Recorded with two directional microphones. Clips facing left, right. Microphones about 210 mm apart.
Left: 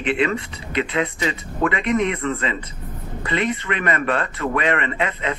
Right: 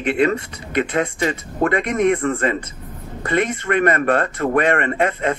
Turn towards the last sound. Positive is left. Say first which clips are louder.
# right 5 dB
turn(degrees=-45)  # may be behind; listen again after turning